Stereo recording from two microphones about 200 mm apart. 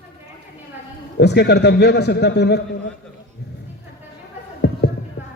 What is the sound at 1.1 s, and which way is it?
A man's voice, 55° left (ahead or behind).